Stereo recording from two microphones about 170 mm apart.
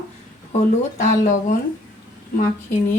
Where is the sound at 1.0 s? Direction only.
45° left (ahead or behind).